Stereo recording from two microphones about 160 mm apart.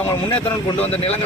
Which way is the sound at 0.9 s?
40° left (ahead or behind).